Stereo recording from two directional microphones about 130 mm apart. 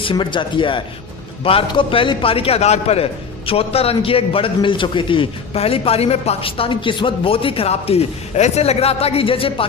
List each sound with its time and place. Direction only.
0.0 s a man's voice: 40° left (ahead or behind)